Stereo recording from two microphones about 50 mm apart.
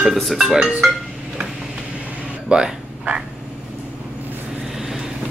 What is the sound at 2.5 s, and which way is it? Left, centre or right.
Speech, centre.